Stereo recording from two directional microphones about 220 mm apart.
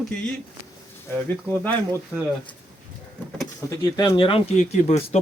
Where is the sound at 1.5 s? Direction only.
5° left (ahead or behind).